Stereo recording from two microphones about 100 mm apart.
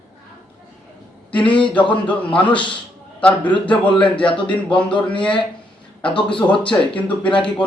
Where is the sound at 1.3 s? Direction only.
55° left (ahead or behind).